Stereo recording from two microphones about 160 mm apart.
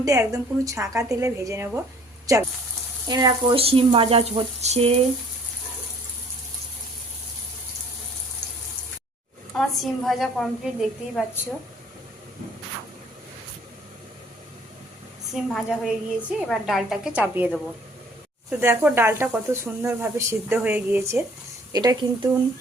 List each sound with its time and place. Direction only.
0.0 s speech: 20° right (ahead or behind); by 4.9 s 40° right (ahead or behind)
9.6 s a woman's voice: centre (ahead or behind)
15.3 s a woman's voice: centre (ahead or behind)
18.6 s speech: 15° right (ahead or behind)